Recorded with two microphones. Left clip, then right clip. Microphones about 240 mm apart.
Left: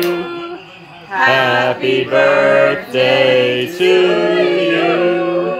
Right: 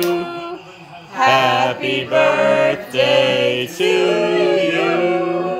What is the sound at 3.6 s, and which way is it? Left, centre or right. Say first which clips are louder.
Music: left 4 dB; right.